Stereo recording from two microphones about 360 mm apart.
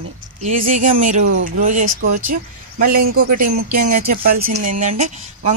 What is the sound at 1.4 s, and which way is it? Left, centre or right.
Speech, right.